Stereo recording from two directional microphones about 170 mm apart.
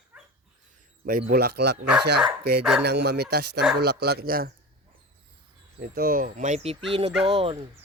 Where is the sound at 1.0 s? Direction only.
55° right (ahead or behind); by 1.8 s 75° right (ahead or behind).